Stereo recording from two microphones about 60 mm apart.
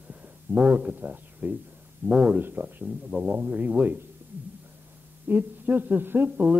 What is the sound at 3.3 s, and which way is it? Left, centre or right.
Speech, right.